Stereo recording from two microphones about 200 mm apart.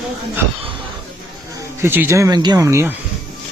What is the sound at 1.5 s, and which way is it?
Speech, 10° right (ahead or behind).